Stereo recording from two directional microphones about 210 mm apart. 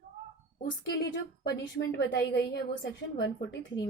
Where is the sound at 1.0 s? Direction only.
50° left (ahead or behind).